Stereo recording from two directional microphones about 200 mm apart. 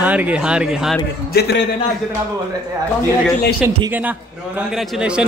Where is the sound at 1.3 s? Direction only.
55° left (ahead or behind).